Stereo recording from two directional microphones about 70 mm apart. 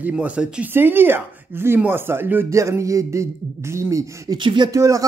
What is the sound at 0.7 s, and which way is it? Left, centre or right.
Speech, right.